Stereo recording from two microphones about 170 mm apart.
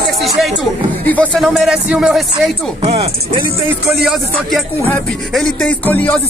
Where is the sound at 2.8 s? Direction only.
35° right (ahead or behind).